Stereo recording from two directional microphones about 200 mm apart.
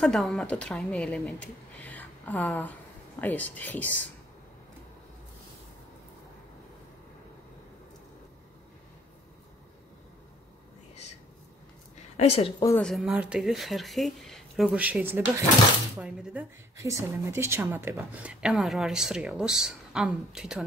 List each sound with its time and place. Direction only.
0.0 s speech: centre (ahead or behind)
12.2 s a woman's voice: 30° left (ahead or behind)
12.6 s speech: 5° left (ahead or behind)